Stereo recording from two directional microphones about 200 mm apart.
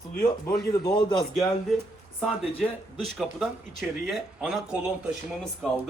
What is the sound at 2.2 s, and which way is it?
Speech, centre (ahead or behind).